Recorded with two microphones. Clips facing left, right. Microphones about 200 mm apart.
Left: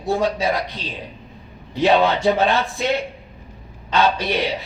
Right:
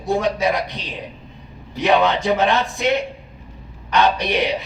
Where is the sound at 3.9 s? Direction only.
15° right (ahead or behind).